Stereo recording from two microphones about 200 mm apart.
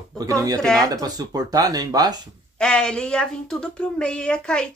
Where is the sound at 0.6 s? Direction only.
Centre (ahead or behind).